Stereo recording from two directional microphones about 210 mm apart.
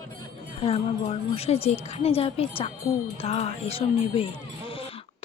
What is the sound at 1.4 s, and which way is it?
Speech, 30° left (ahead or behind).